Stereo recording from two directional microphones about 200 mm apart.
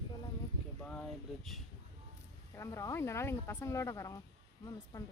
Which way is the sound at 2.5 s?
15° left (ahead or behind).